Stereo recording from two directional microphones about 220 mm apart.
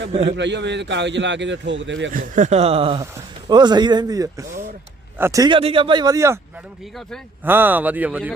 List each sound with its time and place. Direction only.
0.1 s speech: 25° right (ahead or behind)
0.3 s a man's voice: 55° right (ahead or behind)
2.1 s a man's voice: 35° right (ahead or behind); by 6.4 s 15° right (ahead or behind)
7.4 s a man's voice: 10° right (ahead or behind)